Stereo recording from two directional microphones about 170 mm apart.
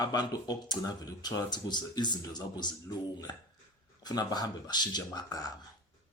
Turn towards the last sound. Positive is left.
turn(degrees=20)  # may be behind; listen again after turning